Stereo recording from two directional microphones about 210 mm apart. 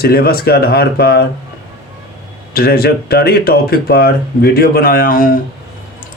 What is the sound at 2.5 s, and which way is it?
Speech, 45° left (ahead or behind).